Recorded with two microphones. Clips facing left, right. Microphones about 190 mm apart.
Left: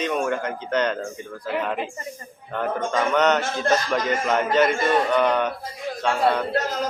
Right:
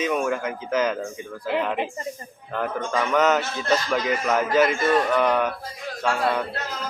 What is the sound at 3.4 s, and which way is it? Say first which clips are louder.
Speech: left 2 dB; 45° left (ahead or behind).